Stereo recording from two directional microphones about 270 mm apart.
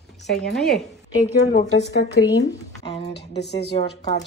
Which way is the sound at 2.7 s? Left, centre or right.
Left.